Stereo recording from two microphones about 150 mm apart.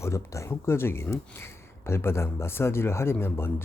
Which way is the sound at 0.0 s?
20° left (ahead or behind).